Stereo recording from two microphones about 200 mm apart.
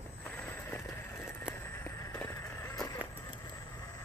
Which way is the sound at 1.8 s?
15° left (ahead or behind).